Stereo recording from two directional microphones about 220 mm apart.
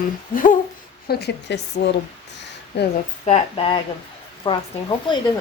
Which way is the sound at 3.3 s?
25° left (ahead or behind).